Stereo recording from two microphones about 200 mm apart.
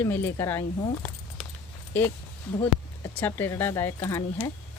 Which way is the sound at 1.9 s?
10° left (ahead or behind).